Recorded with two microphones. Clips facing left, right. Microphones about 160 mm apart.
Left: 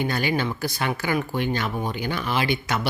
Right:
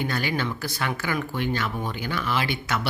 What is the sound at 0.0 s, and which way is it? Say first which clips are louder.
Speech: left 3 dB; 15° left (ahead or behind).